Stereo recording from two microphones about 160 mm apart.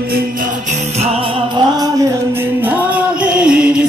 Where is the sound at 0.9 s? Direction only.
35° right (ahead or behind).